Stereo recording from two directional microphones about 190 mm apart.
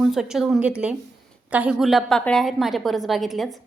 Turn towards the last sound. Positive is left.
turn(degrees=0)  # may be behind; listen again after turning